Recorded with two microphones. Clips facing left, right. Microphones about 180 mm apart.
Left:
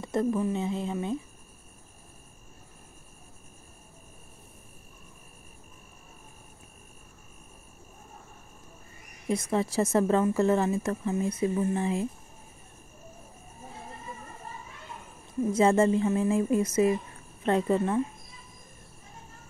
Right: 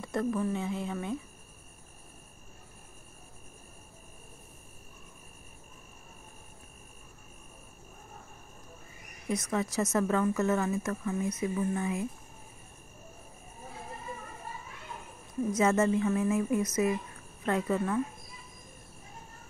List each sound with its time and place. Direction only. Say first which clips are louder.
0.0 s speech: left 3 dB; 20° left (ahead or behind)
9.3 s speech: left 4 dB; 30° left (ahead or behind)
15.5 s speech: left 4 dB; 30° left (ahead or behind)